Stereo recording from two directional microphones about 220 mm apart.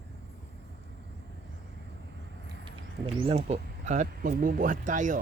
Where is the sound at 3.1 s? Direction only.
25° right (ahead or behind).